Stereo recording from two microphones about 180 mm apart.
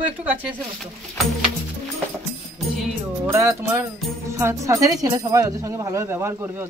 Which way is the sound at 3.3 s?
15° right (ahead or behind).